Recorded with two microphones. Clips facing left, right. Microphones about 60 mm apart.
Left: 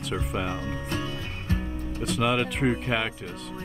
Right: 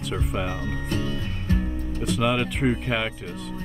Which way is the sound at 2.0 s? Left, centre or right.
Centre.